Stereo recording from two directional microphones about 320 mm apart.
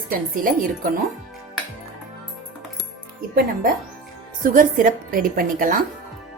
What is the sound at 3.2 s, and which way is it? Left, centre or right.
A woman's voice, right.